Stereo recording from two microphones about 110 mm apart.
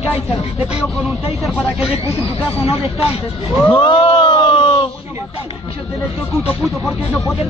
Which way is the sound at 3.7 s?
50° left (ahead or behind).